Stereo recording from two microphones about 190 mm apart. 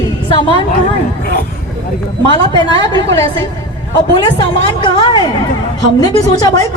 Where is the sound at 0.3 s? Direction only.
25° left (ahead or behind).